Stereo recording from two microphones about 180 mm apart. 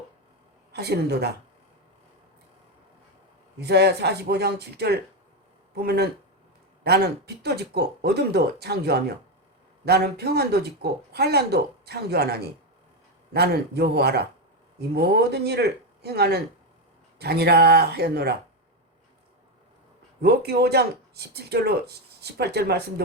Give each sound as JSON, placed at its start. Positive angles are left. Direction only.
{"t": 0.7, "sound": "a woman's voice", "side_deg": -65}
{"t": 3.6, "sound": "speech", "side_deg": -65}
{"t": 20.2, "sound": "speech", "side_deg": -65}